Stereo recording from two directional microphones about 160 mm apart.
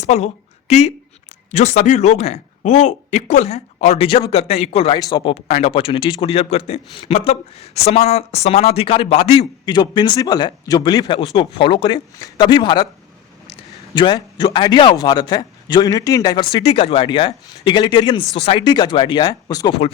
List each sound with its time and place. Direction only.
0.0 s a woman's voice: 45° left (ahead or behind)
4.9 s a man's voice: 25° left (ahead or behind)
5.3 s speech: 45° left (ahead or behind)
9.6 s a man's voice: 25° left (ahead or behind)
13.9 s a man's voice: 30° left (ahead or behind)